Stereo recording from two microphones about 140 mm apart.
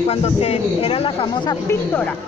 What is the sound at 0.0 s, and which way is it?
A man's voice, 50° left (ahead or behind).